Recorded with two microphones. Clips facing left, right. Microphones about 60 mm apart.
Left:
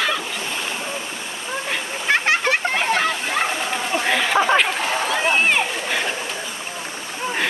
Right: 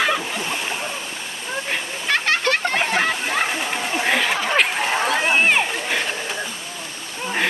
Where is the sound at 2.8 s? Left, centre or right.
Centre.